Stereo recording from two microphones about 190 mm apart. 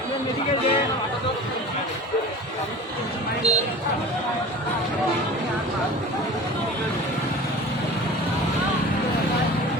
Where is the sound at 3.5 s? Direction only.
35° right (ahead or behind).